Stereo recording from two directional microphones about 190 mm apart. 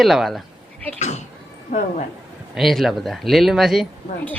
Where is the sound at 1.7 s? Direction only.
45° left (ahead or behind).